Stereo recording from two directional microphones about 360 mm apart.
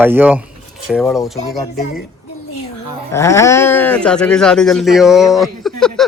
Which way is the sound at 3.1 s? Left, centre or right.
Centre.